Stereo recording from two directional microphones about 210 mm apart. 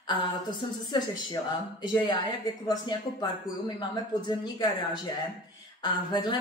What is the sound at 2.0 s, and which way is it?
Speech, 20° left (ahead or behind).